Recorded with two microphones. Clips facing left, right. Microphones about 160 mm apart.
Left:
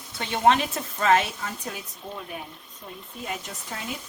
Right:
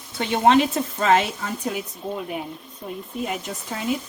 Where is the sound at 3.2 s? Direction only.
20° right (ahead or behind).